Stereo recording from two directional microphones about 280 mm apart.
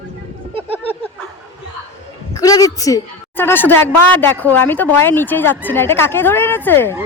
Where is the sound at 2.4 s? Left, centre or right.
Centre.